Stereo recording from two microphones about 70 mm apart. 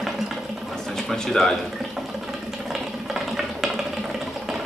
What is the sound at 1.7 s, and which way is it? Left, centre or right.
Sewing machine, centre.